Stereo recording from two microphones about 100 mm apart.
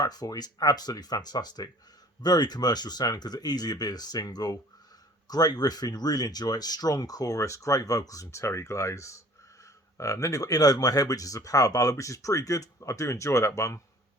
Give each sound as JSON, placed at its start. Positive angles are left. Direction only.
{"t": 0.0, "sound": "speech", "side_deg": 40}